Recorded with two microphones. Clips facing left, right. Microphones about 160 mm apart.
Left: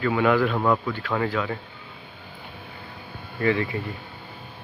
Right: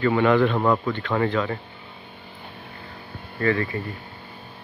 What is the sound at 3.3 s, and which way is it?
Speech, 15° left (ahead or behind).